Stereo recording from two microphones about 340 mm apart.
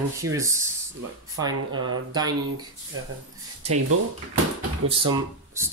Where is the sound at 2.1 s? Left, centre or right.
Centre.